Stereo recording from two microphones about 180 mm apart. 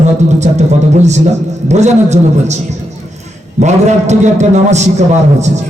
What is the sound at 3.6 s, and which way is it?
Music, 40° right (ahead or behind).